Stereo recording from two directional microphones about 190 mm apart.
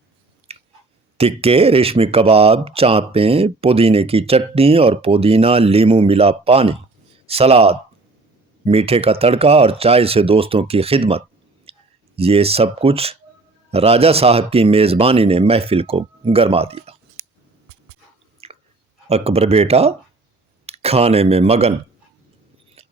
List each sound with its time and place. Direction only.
0.5 s chewing: 30° right (ahead or behind)
1.2 s speech: 30° right (ahead or behind)
11.7 s clicking: 30° right (ahead or behind)
12.1 s speech: 30° right (ahead or behind)
18.4 s chewing: 30° right (ahead or behind)
19.0 s speech: 35° right (ahead or behind)